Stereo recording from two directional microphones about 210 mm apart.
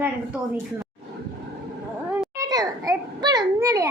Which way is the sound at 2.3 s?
15° right (ahead or behind).